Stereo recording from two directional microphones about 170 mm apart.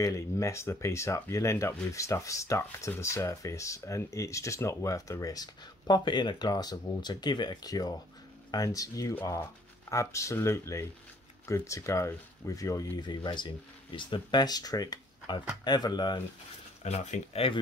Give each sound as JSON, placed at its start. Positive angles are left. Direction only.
{"t": 0.0, "sound": "speech", "side_deg": 20}
{"t": 16.8, "sound": "speech", "side_deg": 40}